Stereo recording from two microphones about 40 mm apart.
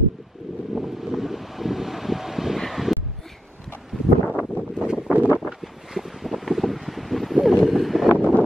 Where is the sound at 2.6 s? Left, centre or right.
Centre.